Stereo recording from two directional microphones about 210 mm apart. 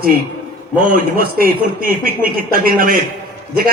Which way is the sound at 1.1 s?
45° right (ahead or behind).